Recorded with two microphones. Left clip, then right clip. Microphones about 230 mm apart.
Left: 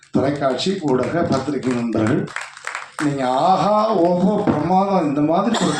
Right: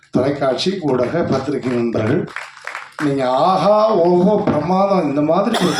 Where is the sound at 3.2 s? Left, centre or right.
Right.